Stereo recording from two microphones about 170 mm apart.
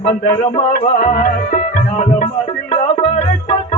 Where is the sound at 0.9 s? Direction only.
50° left (ahead or behind).